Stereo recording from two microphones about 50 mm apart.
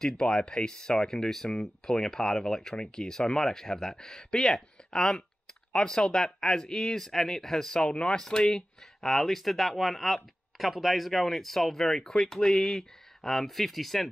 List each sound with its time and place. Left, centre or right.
0.0 s speech: centre
9.0 s speech: centre